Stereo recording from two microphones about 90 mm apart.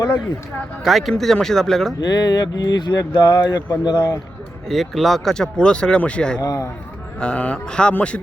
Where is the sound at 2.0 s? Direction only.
50° left (ahead or behind).